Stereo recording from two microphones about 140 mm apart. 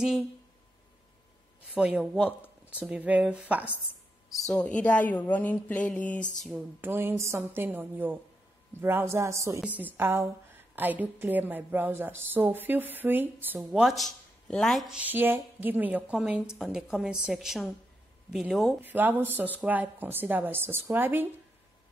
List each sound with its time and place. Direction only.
1.7 s a woman's voice: 5° right (ahead or behind)
4.3 s speech: centre (ahead or behind)
6.5 s a woman's voice: 15° right (ahead or behind)
13.6 s a woman's voice: centre (ahead or behind)
18.8 s a woman's voice: 15° right (ahead or behind)